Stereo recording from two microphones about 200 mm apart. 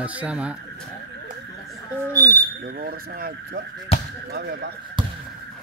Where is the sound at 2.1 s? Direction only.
15° right (ahead or behind).